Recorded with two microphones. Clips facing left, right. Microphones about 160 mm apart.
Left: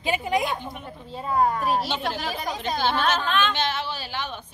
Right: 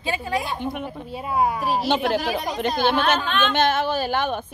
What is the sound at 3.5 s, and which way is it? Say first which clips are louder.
Speech: right 8 dB; 50° right (ahead or behind).